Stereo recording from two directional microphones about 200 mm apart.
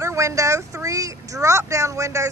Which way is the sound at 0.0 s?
15° right (ahead or behind).